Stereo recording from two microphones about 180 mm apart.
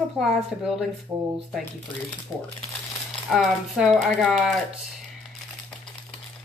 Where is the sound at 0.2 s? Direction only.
Centre (ahead or behind).